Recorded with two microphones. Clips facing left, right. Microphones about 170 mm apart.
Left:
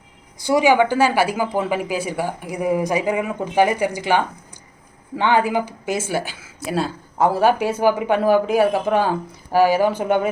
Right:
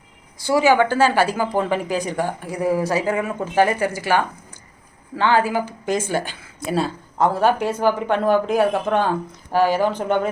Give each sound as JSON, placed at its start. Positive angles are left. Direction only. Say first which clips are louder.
{"t": 0.4, "sound": "speech", "louder": "left 1 dB", "side_deg": 15}